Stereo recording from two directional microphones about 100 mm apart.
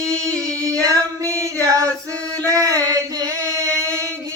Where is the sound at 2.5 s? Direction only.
40° right (ahead or behind).